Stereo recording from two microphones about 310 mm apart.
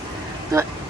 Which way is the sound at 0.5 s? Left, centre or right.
Centre.